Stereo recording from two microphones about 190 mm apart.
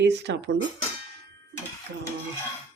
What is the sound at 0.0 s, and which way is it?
Speech, 65° right (ahead or behind).